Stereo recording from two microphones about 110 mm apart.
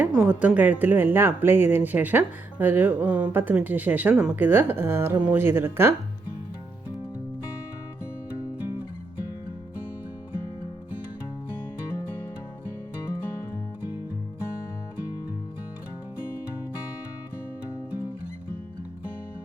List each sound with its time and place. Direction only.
0.0 s speech: 15° right (ahead or behind)